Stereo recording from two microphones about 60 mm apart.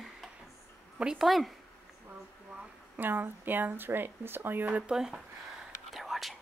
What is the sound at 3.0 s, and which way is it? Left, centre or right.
Speech, right.